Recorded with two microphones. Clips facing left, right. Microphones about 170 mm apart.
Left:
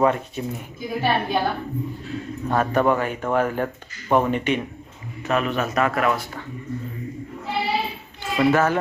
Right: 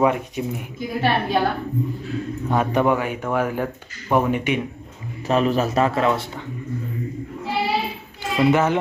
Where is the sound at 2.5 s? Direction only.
10° right (ahead or behind).